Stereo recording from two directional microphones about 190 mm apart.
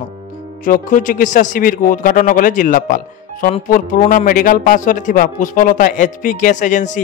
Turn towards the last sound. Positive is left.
turn(degrees=40)  # may be behind; listen again after turning